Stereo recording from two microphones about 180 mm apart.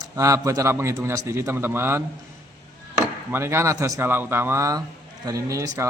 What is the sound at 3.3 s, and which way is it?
A man's voice, 15° right (ahead or behind).